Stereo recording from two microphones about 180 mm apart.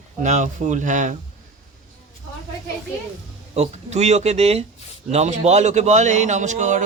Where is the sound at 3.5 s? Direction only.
35° right (ahead or behind).